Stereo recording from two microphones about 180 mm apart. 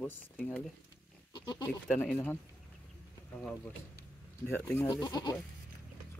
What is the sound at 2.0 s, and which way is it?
Speech, 10° left (ahead or behind).